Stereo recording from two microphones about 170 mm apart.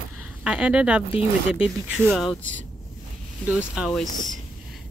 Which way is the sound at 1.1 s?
35° left (ahead or behind).